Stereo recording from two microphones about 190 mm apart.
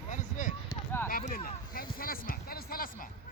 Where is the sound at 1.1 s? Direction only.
50° left (ahead or behind).